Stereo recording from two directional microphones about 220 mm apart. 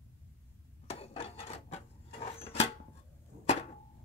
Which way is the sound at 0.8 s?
25° left (ahead or behind).